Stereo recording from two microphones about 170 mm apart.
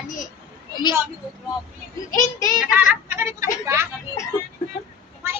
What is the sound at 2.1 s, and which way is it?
Speech, 20° left (ahead or behind).